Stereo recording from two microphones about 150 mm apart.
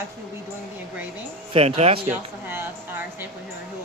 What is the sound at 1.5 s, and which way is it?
Speech, 40° right (ahead or behind).